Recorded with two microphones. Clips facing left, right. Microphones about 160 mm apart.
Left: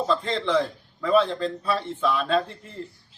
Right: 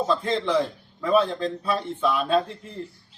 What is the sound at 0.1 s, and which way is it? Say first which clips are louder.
A man's voice: left 1 dB; centre (ahead or behind).